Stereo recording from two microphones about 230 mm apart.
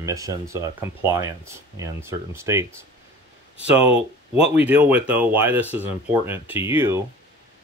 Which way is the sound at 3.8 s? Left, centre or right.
Left.